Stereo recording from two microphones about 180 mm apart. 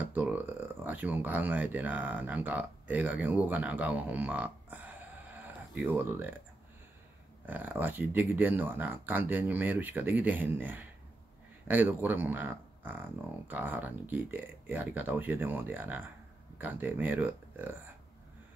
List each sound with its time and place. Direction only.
0.0 s speech: 10° right (ahead or behind)
7.4 s speech: 10° right (ahead or behind)